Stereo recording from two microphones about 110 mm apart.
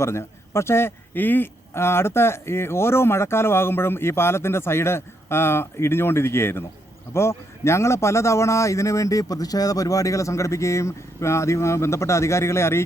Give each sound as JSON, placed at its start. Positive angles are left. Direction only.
{"t": 0.0, "sound": "a man's voice", "side_deg": 25}